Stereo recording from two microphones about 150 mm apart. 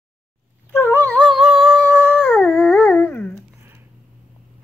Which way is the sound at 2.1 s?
10° left (ahead or behind).